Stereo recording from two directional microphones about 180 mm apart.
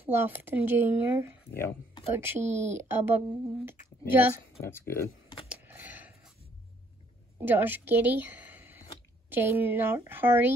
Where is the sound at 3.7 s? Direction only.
10° right (ahead or behind).